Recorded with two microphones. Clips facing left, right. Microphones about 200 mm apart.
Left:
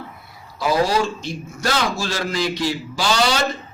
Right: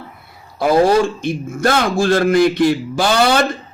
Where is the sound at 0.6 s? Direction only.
55° right (ahead or behind).